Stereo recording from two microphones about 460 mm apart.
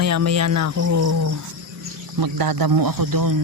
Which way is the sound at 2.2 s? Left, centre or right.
Right.